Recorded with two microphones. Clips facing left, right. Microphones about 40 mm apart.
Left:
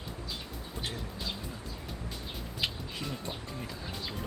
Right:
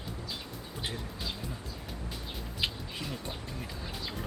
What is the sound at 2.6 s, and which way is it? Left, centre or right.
Speech, centre.